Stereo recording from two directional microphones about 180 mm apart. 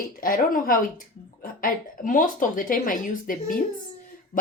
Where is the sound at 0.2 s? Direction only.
50° left (ahead or behind).